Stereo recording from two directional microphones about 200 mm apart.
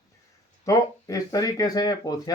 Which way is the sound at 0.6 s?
15° left (ahead or behind).